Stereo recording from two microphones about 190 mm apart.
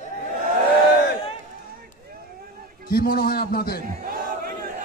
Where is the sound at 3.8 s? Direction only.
50° right (ahead or behind).